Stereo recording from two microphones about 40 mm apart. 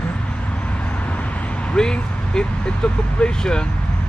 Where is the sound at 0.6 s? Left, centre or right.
Left.